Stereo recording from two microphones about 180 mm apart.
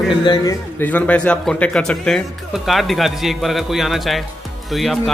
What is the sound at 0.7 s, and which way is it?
Speech, 10° left (ahead or behind).